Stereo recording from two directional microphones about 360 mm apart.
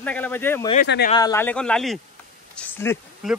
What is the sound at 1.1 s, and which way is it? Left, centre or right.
Speech, centre.